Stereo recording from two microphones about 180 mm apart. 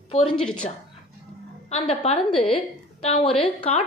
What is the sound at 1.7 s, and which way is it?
A woman's voice, 35° left (ahead or behind).